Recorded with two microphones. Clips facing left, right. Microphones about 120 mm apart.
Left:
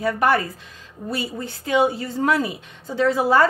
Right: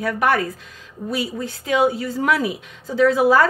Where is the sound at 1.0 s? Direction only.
Centre (ahead or behind).